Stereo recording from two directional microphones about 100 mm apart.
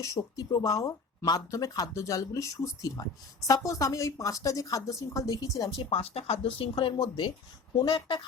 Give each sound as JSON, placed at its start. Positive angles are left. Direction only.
{"t": 0.0, "sound": "speech", "side_deg": 35}
{"t": 5.7, "sound": "speech", "side_deg": 70}